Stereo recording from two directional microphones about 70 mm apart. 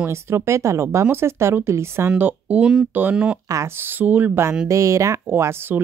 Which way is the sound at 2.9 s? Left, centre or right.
Right.